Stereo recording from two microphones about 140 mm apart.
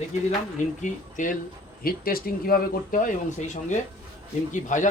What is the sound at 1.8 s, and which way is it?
Speech, 90° left.